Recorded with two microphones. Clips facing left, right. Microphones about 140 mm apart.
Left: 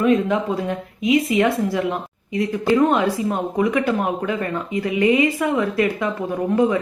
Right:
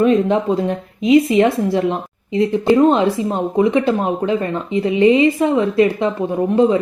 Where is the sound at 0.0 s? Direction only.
25° right (ahead or behind).